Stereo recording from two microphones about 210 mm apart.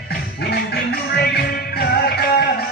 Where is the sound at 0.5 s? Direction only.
50° left (ahead or behind).